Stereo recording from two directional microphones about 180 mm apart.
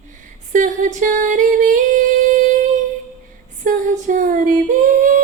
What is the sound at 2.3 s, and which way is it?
Music, 45° right (ahead or behind).